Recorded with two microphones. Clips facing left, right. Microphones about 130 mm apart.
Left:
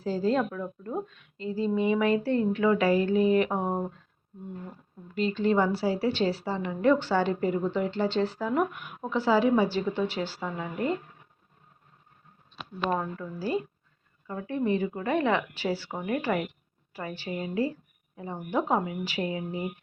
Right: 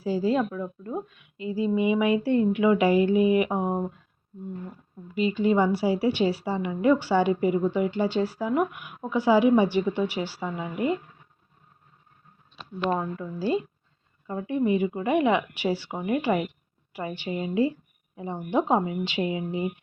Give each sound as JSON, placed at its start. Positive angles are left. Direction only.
{"t": 0.0, "sound": "a woman's voice", "side_deg": -10}
{"t": 5.1, "sound": "a woman's voice", "side_deg": -10}
{"t": 12.9, "sound": "a woman's voice", "side_deg": -10}
{"t": 13.4, "sound": "a woman's voice", "side_deg": -20}